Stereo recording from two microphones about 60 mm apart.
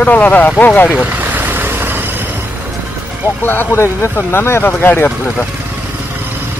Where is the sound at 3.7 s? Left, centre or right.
Left.